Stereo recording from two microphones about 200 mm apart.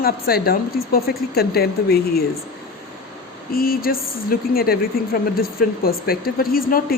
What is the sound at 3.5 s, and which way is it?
A woman's voice, 45° left (ahead or behind).